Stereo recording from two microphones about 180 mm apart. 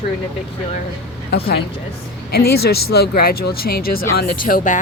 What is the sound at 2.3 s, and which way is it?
Speech, 60° left (ahead or behind).